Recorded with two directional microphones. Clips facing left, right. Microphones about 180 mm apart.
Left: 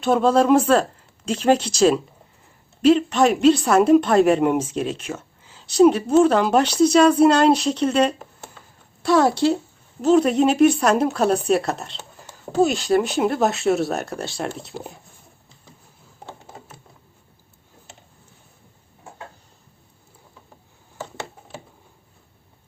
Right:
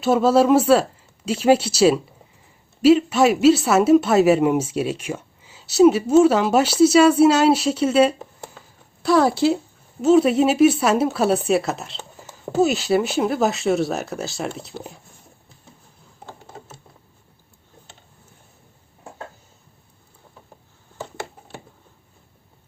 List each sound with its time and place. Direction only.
0.0 s speech: 5° right (ahead or behind)